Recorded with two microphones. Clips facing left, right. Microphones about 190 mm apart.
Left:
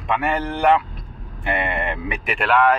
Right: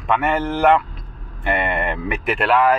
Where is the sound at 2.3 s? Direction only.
5° right (ahead or behind).